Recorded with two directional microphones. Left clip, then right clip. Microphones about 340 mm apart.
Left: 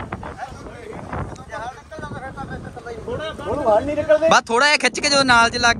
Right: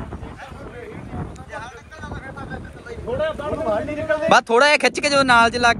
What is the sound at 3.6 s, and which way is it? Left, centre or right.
Speech, left.